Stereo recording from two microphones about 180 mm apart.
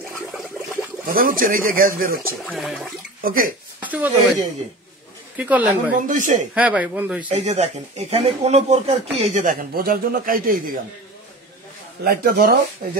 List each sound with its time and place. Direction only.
1.0 s speech: 50° right (ahead or behind)
2.5 s toilet flush: centre (ahead or behind)
3.2 s speech: 50° right (ahead or behind)
3.8 s speech: 10° right (ahead or behind)
5.4 s speech: 10° right (ahead or behind)
5.9 s speech: 45° right (ahead or behind)
6.5 s speech: 10° right (ahead or behind)
7.2 s speech: 40° right (ahead or behind)
12.0 s speech: 60° right (ahead or behind)